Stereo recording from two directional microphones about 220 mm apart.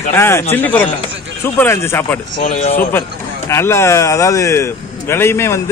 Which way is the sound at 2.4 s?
30° left (ahead or behind).